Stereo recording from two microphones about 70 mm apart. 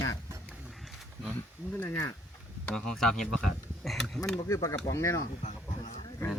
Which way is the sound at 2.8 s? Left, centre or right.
Centre.